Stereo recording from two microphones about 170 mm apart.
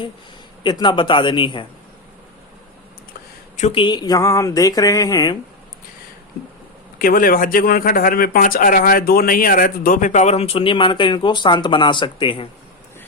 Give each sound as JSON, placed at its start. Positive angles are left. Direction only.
{"t": 0.6, "sound": "speech", "side_deg": 25}
{"t": 3.6, "sound": "speech", "side_deg": 30}
{"t": 7.0, "sound": "speech", "side_deg": 60}